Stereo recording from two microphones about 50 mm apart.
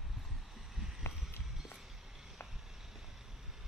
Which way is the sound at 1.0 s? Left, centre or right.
Left.